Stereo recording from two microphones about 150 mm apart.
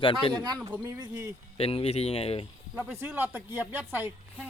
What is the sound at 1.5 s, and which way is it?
Speech, 40° left (ahead or behind).